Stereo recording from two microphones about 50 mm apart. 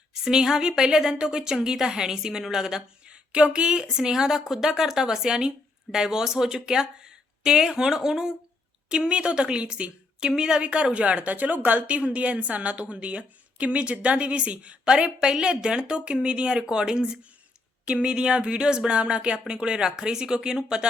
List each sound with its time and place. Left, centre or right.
0.1 s a woman's voice: centre